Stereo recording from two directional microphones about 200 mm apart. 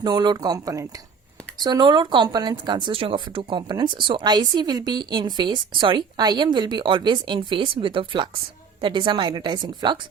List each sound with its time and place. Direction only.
0.0 s speech: 20° right (ahead or behind)